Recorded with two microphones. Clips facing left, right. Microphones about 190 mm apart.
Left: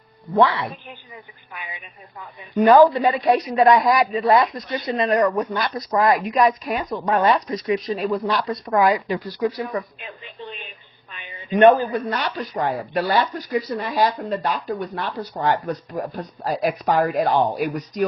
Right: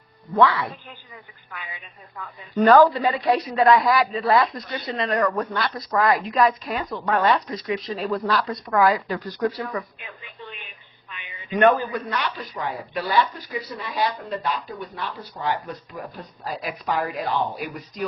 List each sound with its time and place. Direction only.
0.3 s speech: 25° left (ahead or behind)
9.7 s a sound: 30° left (ahead or behind)
11.1 s speech: 40° left (ahead or behind)